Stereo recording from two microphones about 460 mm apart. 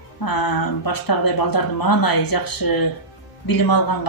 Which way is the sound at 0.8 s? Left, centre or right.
Left.